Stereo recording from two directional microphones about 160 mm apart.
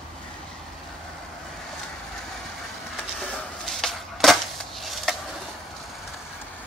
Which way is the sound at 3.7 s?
5° left (ahead or behind).